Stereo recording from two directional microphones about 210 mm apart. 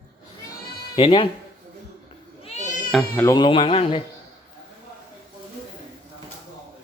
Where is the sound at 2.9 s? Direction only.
10° left (ahead or behind).